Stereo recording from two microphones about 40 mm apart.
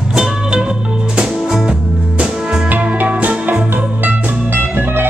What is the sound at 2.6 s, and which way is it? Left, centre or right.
Music, right.